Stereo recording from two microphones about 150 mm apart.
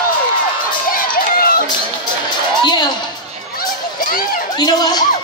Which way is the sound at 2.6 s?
30° left (ahead or behind).